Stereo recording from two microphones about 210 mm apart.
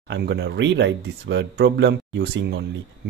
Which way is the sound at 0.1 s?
55° right (ahead or behind).